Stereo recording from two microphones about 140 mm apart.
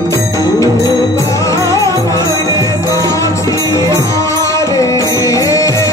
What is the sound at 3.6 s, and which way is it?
Speech, 20° left (ahead or behind).